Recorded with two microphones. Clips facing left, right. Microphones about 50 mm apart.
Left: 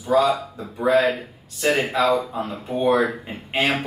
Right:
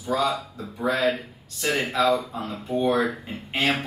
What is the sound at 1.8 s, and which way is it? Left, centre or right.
Speech, centre.